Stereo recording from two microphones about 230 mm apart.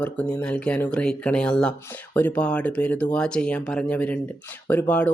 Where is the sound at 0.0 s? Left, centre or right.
Centre.